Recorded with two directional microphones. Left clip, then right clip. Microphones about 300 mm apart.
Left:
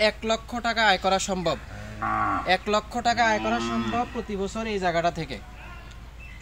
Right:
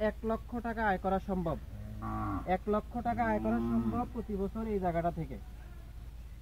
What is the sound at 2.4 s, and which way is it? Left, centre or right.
Speech, centre.